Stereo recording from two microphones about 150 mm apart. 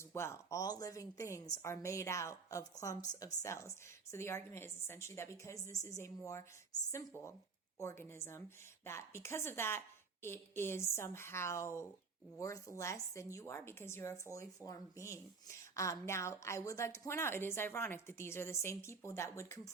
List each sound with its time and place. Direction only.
0.1 s a woman's voice: 15° left (ahead or behind)